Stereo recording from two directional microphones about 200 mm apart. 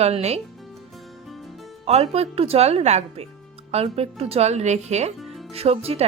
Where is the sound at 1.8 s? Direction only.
30° right (ahead or behind).